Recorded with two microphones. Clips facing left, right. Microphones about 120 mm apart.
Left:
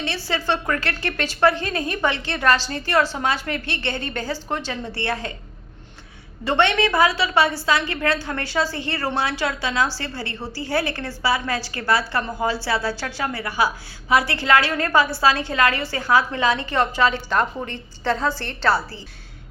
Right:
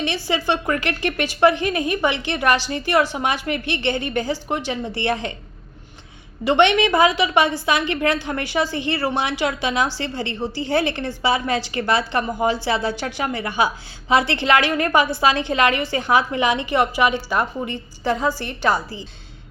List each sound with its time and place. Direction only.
0.0 s a woman's voice: 15° right (ahead or behind)
6.4 s a woman's voice: 15° right (ahead or behind)